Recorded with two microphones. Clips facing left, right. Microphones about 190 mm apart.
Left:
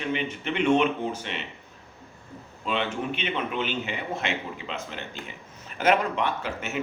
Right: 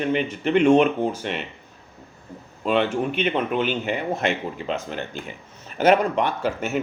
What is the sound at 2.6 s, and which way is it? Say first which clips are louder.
Speech: right 7 dB; 45° right (ahead or behind).